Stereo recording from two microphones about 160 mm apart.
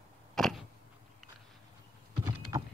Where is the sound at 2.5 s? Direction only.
25° right (ahead or behind).